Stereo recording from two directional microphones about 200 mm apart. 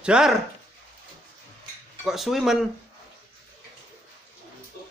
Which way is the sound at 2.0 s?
Centre (ahead or behind).